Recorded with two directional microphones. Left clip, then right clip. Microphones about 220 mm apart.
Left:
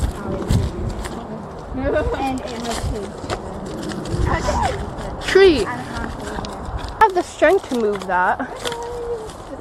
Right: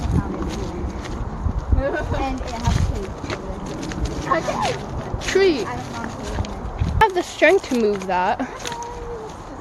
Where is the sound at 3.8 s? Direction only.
30° left (ahead or behind).